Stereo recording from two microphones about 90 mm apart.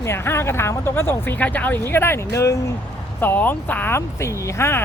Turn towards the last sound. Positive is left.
turn(degrees=30)  # may be behind; listen again after turning